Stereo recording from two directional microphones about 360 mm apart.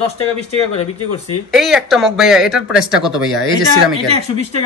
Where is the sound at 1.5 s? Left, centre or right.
Centre.